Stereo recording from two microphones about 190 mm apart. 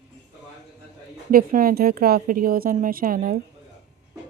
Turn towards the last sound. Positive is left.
turn(degrees=-50)  # may be behind; listen again after turning